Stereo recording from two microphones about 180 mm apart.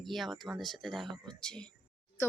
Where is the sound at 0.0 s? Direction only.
Centre (ahead or behind).